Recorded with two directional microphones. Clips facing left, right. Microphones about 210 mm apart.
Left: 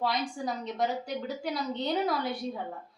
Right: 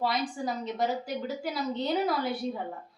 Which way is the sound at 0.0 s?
Centre (ahead or behind).